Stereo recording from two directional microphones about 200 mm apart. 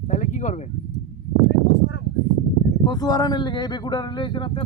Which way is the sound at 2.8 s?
20° left (ahead or behind).